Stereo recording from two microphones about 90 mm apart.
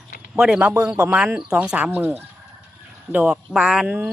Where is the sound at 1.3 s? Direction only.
10° right (ahead or behind).